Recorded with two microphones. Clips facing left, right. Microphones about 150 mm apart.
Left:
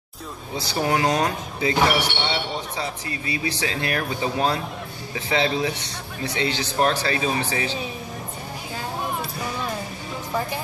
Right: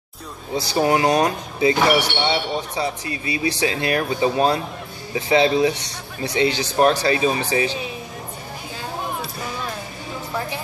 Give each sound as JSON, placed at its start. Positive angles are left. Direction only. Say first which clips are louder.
{"t": 0.6, "sound": "speech", "louder": "right 4 dB", "side_deg": -15}